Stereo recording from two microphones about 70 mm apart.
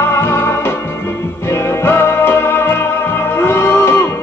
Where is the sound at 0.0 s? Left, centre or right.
Left.